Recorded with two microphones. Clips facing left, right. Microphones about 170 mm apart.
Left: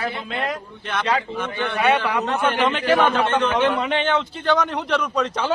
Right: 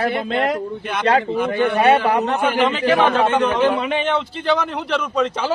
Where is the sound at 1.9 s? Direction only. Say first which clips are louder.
Right 5 dB; 35° right (ahead or behind).